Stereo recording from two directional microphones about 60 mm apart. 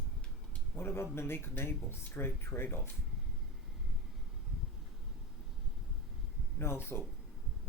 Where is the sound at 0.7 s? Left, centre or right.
Left.